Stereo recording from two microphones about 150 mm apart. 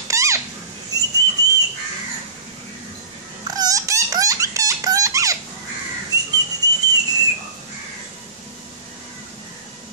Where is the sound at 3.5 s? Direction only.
25° right (ahead or behind).